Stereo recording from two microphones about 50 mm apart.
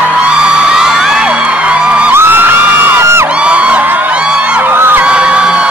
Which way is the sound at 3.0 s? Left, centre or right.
Right.